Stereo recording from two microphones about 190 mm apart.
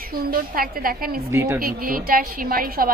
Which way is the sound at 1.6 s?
50° right (ahead or behind).